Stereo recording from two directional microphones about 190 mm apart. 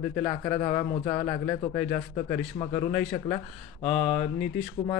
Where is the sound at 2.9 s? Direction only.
10° left (ahead or behind).